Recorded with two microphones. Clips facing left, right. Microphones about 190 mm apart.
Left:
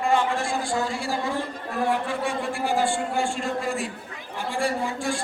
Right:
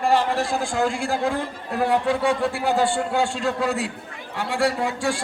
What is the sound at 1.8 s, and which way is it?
A man's voice, 70° right (ahead or behind).